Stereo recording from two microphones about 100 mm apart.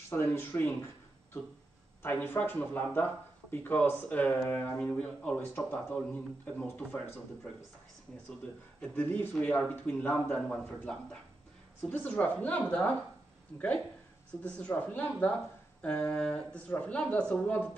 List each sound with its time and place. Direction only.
0.1 s speech: 20° left (ahead or behind)
2.0 s speech: 20° left (ahead or behind)
8.8 s speech: 15° left (ahead or behind)
11.9 s speech: 15° left (ahead or behind)
14.4 s speech: 15° left (ahead or behind)